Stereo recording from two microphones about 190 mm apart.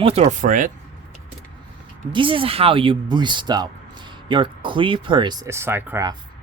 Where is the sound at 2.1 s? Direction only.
25° right (ahead or behind).